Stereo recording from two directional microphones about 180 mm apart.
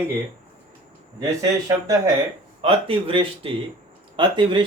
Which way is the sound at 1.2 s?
20° right (ahead or behind).